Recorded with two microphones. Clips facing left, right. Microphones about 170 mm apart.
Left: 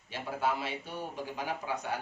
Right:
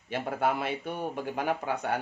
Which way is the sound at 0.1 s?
55° right (ahead or behind).